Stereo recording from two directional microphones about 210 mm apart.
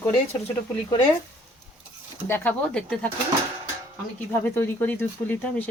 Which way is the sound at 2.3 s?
10° left (ahead or behind).